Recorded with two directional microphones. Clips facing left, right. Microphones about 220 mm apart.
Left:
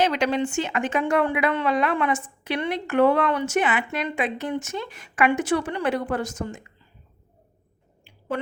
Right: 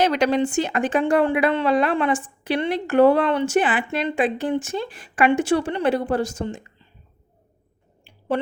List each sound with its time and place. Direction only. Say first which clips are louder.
0.0 s speech: right 3 dB; 40° right (ahead or behind)